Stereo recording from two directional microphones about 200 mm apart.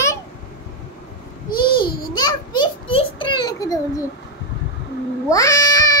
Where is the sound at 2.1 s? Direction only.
20° left (ahead or behind).